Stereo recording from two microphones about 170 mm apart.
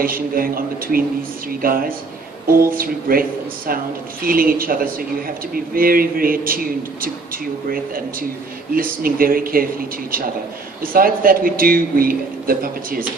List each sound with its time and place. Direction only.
0.0 s speech: 55° right (ahead or behind)
10.8 s speech: 55° right (ahead or behind)